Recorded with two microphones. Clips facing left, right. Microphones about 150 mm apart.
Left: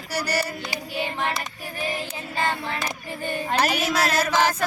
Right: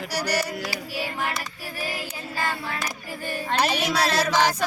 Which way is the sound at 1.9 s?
25° left (ahead or behind).